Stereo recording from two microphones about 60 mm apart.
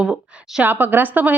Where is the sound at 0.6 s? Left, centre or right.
Right.